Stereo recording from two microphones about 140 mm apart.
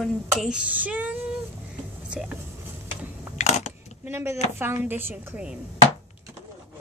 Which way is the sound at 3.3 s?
55° left (ahead or behind).